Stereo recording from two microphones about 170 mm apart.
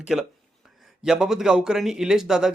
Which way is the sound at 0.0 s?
5° right (ahead or behind).